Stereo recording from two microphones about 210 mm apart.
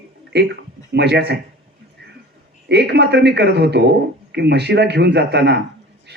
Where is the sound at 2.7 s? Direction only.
55° right (ahead or behind).